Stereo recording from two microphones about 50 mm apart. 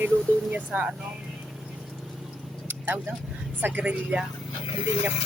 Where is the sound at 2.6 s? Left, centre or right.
Right.